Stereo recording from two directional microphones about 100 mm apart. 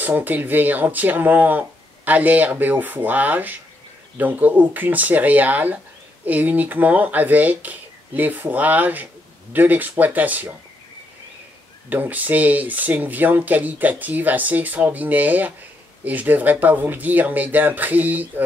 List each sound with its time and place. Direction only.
0.0 s speech: 20° right (ahead or behind)
11.9 s speech: 15° right (ahead or behind)